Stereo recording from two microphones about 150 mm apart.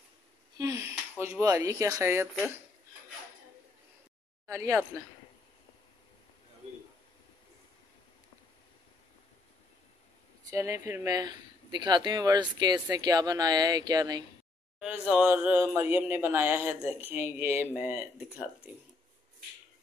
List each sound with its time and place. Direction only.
0.6 s a sound: 20° right (ahead or behind)
1.2 s speech: 20° right (ahead or behind)
4.5 s speech: 20° right (ahead or behind)
10.4 s speech: 20° right (ahead or behind)
14.8 s speech: 5° right (ahead or behind)